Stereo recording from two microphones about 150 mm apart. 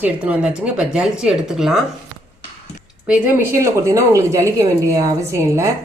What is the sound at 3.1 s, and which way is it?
Speech, 15° right (ahead or behind).